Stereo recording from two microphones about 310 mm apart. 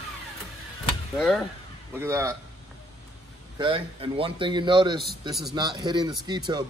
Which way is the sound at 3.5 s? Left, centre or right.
Centre.